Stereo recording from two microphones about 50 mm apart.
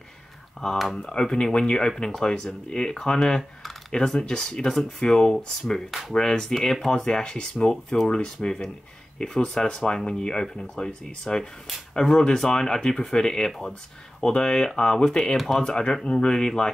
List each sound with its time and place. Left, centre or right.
0.9 s speech: centre
5.9 s speech: centre
6.1 s speech: centre
11.2 s speech: centre
15.3 s speech: centre
15.6 s speech: centre